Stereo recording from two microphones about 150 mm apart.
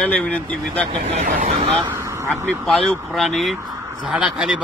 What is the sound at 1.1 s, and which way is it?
Speech, 55° right (ahead or behind).